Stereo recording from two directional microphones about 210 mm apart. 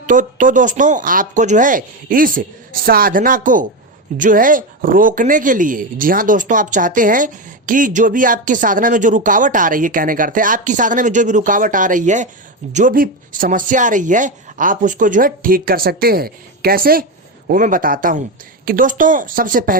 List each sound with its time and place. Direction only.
0.0 s speech: 35° right (ahead or behind)